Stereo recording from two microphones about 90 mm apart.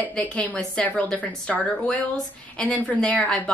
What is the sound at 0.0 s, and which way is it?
A woman's voice, 15° left (ahead or behind).